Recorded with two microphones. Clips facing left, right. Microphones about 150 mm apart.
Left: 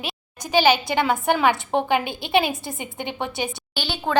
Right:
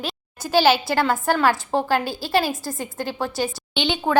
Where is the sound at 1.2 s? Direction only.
15° left (ahead or behind).